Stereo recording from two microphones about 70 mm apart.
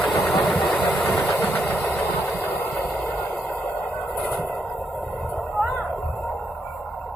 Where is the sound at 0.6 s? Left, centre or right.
Left.